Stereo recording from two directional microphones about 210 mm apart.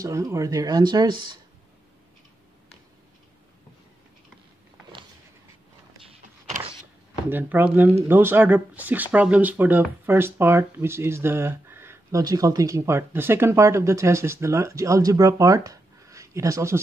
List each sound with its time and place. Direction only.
0.0 s speech: 15° right (ahead or behind)
7.2 s speech: 10° right (ahead or behind)